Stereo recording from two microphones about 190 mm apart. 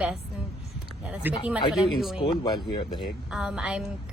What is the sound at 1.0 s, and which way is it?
A woman's voice, 5° right (ahead or behind).